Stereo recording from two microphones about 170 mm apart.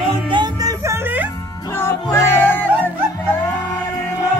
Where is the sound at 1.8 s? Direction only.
15° left (ahead or behind).